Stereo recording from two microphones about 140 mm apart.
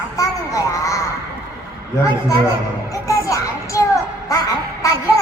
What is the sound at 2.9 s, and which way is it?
A child's voice, 25° left (ahead or behind).